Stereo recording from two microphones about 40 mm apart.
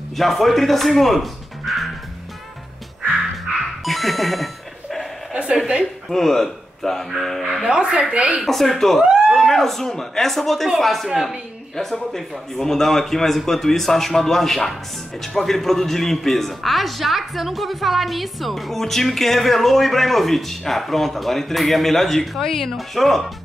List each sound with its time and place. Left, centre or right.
0.1 s speech: centre
3.8 s speech: centre
5.3 s a woman's voice: right
6.0 s a man's voice: centre
7.6 s a woman's voice: centre
8.5 s a man's voice: centre